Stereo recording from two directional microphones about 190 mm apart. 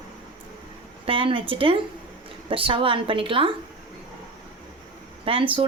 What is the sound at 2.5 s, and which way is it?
A woman's voice, 30° right (ahead or behind).